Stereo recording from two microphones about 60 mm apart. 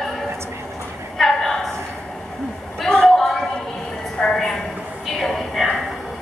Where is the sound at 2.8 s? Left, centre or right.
Centre.